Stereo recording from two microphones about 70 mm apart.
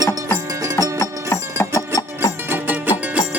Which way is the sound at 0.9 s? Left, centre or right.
Left.